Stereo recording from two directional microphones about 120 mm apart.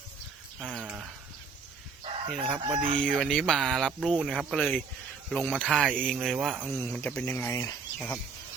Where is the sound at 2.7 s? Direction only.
45° right (ahead or behind).